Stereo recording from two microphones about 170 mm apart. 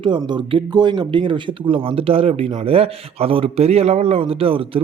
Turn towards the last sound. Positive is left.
turn(degrees=-30)  # may be behind; listen again after turning